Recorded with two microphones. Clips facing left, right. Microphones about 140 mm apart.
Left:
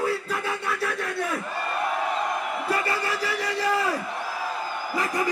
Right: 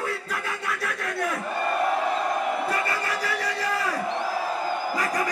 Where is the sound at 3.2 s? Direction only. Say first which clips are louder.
Left 1 dB; 30° left (ahead or behind).